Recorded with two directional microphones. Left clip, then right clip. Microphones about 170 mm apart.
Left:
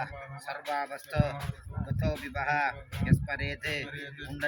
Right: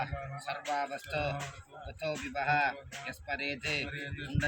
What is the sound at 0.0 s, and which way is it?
Speech, 15° right (ahead or behind).